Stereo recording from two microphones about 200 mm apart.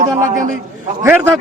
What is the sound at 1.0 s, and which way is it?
Speech, 10° right (ahead or behind).